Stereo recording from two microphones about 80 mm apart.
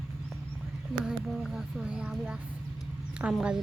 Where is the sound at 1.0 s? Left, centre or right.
Centre.